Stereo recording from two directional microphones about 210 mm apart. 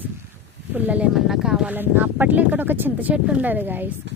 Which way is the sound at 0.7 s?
5° right (ahead or behind).